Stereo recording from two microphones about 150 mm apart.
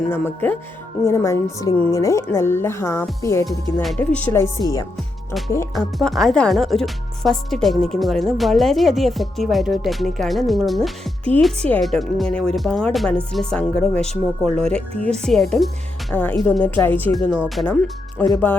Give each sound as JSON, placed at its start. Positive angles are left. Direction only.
{"t": 0.1, "sound": "speech", "side_deg": 15}
{"t": 3.8, "sound": "speech", "side_deg": 10}
{"t": 5.7, "sound": "speech", "side_deg": 0}
{"t": 17.4, "sound": "speech", "side_deg": 0}
{"t": 18.2, "sound": "speech", "side_deg": 15}